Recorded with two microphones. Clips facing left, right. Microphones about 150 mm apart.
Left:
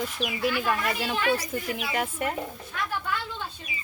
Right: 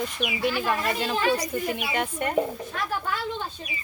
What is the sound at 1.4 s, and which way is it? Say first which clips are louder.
Speech: right 3 dB; centre (ahead or behind).